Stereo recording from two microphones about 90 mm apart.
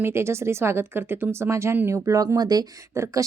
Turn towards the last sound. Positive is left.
turn(degrees=-35)  # may be behind; listen again after turning